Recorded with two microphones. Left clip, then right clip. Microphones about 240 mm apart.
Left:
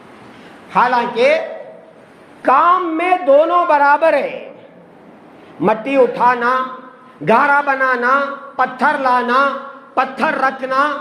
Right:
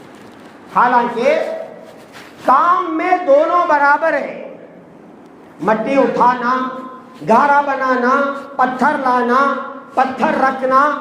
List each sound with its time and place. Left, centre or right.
0.7 s a man's voice: left
2.5 s a man's voice: left
5.6 s a man's voice: left